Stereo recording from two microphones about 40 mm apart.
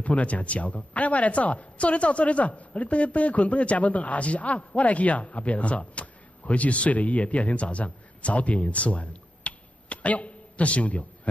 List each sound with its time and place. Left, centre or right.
0.0 s a woman's voice: left